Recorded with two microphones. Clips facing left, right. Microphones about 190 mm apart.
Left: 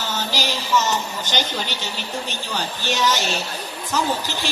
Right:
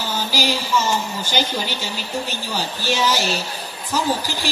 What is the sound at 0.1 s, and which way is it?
A woman's voice, 10° right (ahead or behind).